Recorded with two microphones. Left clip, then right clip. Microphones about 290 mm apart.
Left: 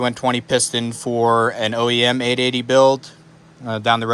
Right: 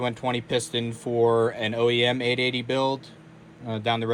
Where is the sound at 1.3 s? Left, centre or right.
Left.